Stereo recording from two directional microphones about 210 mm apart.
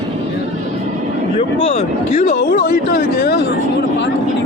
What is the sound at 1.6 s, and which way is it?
Speech, 30° left (ahead or behind).